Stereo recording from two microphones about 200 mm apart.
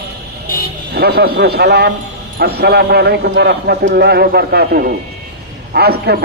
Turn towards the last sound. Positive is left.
turn(degrees=-55)  # may be behind; listen again after turning